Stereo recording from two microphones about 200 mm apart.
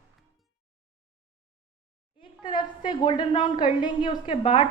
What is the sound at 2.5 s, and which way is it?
A woman's voice, 25° left (ahead or behind).